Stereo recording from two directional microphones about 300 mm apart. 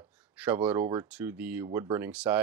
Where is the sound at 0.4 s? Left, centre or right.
Centre.